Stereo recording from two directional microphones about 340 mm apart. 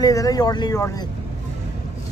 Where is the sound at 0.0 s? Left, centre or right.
Centre.